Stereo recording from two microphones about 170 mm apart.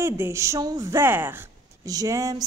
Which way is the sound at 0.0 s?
15° right (ahead or behind).